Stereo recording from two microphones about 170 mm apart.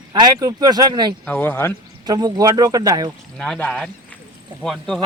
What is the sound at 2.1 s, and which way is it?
Speech, 20° right (ahead or behind).